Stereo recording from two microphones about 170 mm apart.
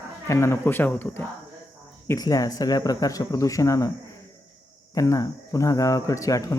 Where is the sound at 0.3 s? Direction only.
15° left (ahead or behind).